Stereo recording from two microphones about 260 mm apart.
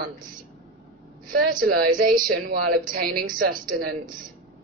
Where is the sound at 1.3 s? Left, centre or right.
Right.